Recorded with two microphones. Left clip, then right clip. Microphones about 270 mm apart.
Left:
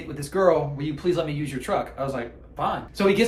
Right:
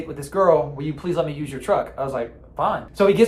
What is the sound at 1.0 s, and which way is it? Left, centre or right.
A man's voice, centre.